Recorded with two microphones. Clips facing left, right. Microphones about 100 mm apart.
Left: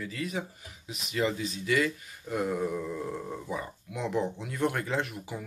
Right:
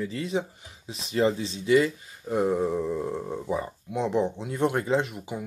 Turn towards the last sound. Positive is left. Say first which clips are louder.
# right 6 dB
turn(degrees=-20)  # may be behind; listen again after turning